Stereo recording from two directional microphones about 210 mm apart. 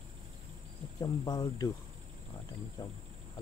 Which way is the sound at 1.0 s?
20° left (ahead or behind).